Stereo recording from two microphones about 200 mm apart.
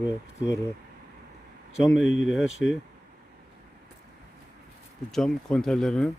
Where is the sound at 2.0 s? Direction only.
75° left (ahead or behind).